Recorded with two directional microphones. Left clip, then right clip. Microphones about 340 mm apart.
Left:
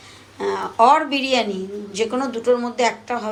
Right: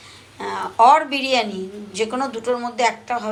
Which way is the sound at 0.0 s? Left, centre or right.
Centre.